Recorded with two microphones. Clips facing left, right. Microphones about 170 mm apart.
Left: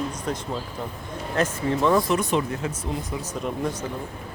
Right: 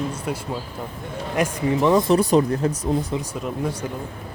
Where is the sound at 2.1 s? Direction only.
35° right (ahead or behind).